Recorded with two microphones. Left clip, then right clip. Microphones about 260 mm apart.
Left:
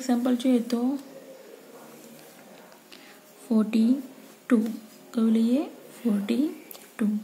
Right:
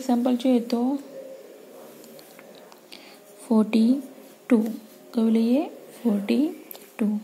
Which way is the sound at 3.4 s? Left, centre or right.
Centre.